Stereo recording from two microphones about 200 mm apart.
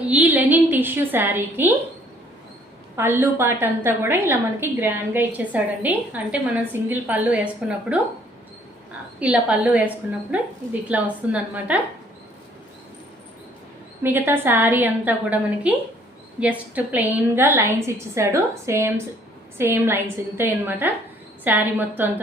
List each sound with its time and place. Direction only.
0.1 s a woman's voice: 10° right (ahead or behind)
2.9 s a woman's voice: 10° right (ahead or behind)
9.2 s a woman's voice: 5° right (ahead or behind)
14.0 s a woman's voice: 10° right (ahead or behind)